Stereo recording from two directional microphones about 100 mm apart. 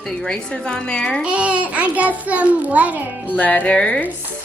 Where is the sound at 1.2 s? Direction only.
10° right (ahead or behind).